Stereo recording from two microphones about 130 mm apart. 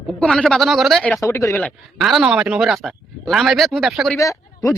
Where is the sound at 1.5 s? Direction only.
5° left (ahead or behind).